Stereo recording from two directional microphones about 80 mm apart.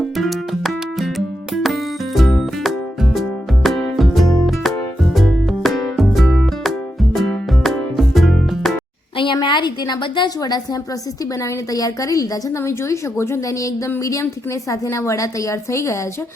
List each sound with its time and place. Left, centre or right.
0.0 s music: centre
9.1 s a sound: left
10.2 s a woman's voice: left
11.7 s a woman's voice: left